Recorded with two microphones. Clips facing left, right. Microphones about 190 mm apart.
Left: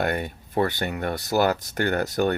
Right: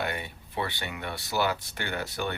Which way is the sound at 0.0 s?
45° left (ahead or behind).